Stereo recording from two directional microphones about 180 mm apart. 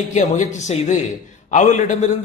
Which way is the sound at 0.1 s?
45° left (ahead or behind).